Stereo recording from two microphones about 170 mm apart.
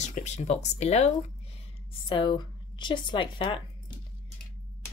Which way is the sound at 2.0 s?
30° left (ahead or behind).